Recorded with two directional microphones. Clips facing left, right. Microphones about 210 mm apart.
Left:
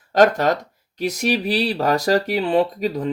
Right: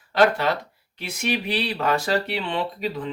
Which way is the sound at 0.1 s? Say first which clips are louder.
Left 4 dB; 45° left (ahead or behind).